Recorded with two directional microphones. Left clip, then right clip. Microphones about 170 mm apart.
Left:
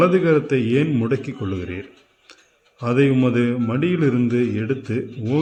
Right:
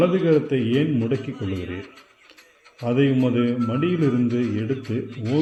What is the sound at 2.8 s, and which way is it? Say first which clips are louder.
A man's voice: left 3 dB; 15° left (ahead or behind).